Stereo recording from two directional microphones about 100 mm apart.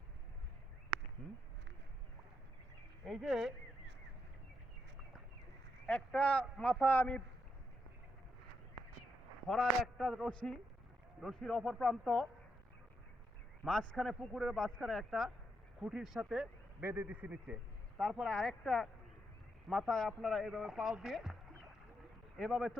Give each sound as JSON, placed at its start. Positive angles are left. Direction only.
{"t": 1.2, "sound": "a man's voice", "side_deg": 5}
{"t": 3.1, "sound": "a man's voice", "side_deg": 0}
{"t": 5.8, "sound": "speech", "side_deg": 10}
{"t": 9.5, "sound": "a man's voice", "side_deg": 0}
{"t": 13.7, "sound": "a man's voice", "side_deg": 5}
{"t": 16.8, "sound": "a man's voice", "side_deg": -15}
{"t": 18.0, "sound": "a man's voice", "side_deg": 0}
{"t": 22.4, "sound": "a man's voice", "side_deg": 0}